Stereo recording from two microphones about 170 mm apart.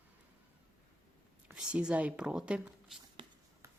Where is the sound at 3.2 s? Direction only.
30° right (ahead or behind).